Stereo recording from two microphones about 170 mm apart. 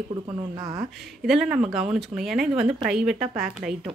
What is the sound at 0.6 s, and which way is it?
Speech, 20° right (ahead or behind).